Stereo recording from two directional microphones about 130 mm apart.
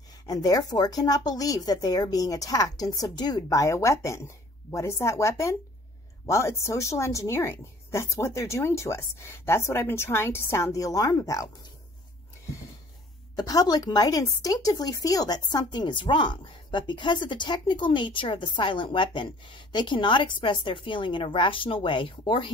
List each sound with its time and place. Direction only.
0.3 s speech: 30° left (ahead or behind)
13.4 s a woman's voice: 30° left (ahead or behind)